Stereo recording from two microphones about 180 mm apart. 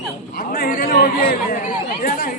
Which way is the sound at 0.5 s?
55° left (ahead or behind).